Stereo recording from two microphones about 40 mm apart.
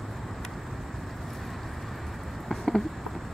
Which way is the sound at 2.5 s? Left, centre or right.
Centre.